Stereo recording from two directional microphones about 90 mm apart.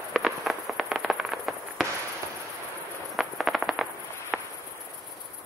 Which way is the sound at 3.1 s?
Centre (ahead or behind).